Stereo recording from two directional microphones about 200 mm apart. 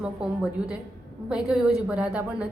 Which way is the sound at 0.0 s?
5° right (ahead or behind).